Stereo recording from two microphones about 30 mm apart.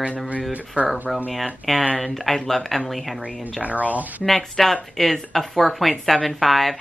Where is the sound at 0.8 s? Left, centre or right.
Right.